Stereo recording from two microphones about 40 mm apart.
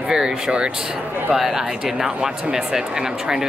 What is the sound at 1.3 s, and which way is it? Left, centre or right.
Speech, centre.